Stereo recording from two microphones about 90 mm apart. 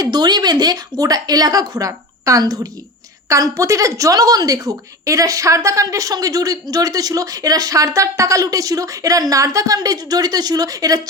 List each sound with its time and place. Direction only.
0.0 s a woman's voice: 50° right (ahead or behind)